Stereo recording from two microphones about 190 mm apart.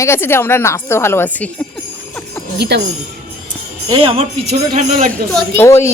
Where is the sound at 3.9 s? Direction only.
30° right (ahead or behind).